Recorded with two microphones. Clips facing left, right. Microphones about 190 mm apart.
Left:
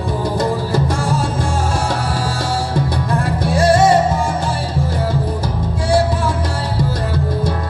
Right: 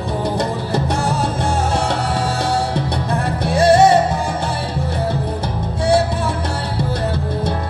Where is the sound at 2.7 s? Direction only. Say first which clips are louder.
Left 2 dB; 25° right (ahead or behind).